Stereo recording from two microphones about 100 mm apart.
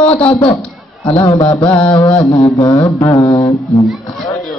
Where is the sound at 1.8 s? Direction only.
20° left (ahead or behind).